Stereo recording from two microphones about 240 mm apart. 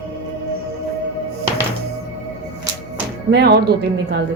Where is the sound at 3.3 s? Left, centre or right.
Right.